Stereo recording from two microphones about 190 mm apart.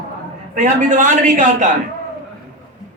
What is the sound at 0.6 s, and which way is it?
A man's voice, 40° right (ahead or behind).